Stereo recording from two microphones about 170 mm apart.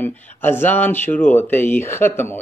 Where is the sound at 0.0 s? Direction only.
10° left (ahead or behind).